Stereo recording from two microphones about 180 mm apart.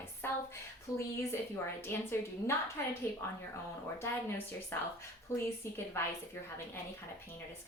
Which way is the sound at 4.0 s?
15° left (ahead or behind).